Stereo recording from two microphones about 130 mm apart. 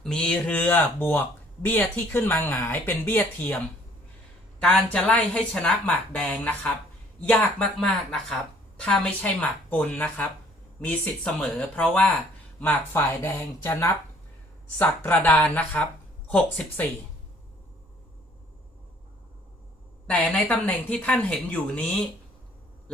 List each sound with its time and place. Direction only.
0.0 s a woman's voice: 5° left (ahead or behind)
4.6 s a woman's voice: 10° left (ahead or behind)
20.1 s a woman's voice: 10° left (ahead or behind)